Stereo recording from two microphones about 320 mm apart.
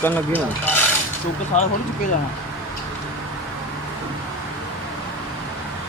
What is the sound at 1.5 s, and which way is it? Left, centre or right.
Speech, left.